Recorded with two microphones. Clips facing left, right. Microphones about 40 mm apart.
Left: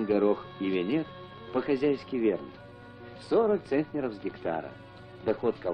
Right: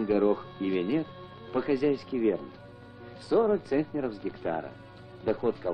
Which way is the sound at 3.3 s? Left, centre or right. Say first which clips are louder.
Even; centre.